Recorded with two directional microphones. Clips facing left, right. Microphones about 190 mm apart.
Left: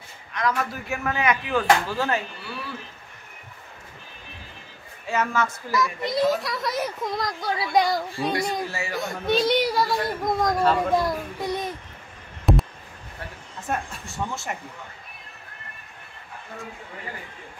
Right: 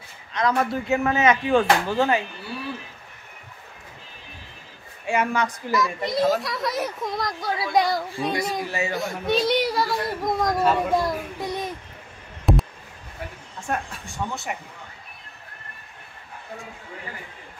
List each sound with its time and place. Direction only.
0.3 s speech: 25° right (ahead or behind)
5.0 s a woman's voice: 15° right (ahead or behind)
5.7 s speech: centre (ahead or behind)
8.5 s speech: 20° right (ahead or behind)
9.0 s speech: centre (ahead or behind)
12.5 s a sound: centre (ahead or behind)
13.6 s speech: 5° left (ahead or behind)